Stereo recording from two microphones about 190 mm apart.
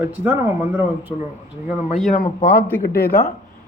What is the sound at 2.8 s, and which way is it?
Speech, 50° left (ahead or behind).